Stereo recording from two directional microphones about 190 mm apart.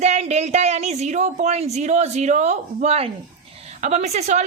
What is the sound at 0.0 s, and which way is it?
A woman's voice, 35° right (ahead or behind).